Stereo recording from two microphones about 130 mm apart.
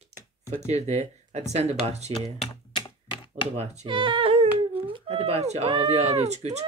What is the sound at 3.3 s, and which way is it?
Speech, 60° right (ahead or behind).